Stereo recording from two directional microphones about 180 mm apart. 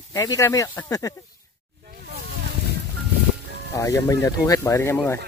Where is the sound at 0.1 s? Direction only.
20° left (ahead or behind).